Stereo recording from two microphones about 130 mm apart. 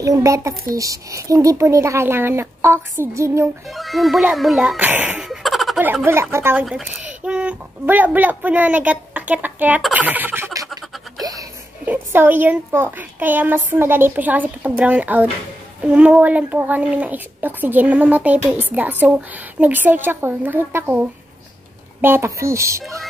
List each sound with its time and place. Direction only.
0.0 s speech: 25° right (ahead or behind)
3.6 s speech: centre (ahead or behind)
4.7 s speech: 15° right (ahead or behind)
5.2 s laughter: centre (ahead or behind)
6.3 s speech: 20° right (ahead or behind)
9.9 s a sound: 15° right (ahead or behind)
11.1 s music: 30° right (ahead or behind)
11.8 s speech: 15° right (ahead or behind)
22.0 s speech: 20° right (ahead or behind)